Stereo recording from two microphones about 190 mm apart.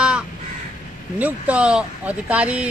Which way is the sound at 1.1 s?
5° right (ahead or behind).